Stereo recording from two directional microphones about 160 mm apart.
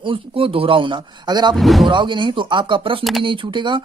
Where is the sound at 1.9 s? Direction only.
30° right (ahead or behind).